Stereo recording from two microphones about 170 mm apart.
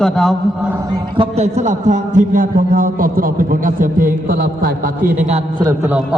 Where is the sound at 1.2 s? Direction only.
40° right (ahead or behind); by 4.7 s 60° right (ahead or behind).